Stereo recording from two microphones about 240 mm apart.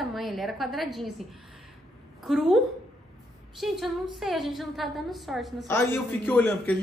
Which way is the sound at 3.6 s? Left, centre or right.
Centre.